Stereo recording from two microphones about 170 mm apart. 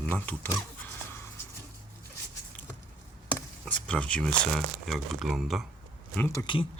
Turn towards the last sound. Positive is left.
turn(degrees=25)  # may be behind; listen again after turning